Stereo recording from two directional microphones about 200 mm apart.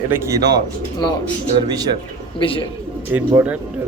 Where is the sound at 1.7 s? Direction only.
20° right (ahead or behind).